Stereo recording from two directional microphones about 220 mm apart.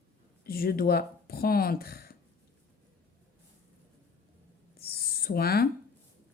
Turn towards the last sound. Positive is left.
turn(degrees=45)  # may be behind; listen again after turning